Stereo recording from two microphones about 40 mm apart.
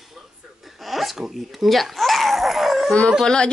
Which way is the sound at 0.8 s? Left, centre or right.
Centre.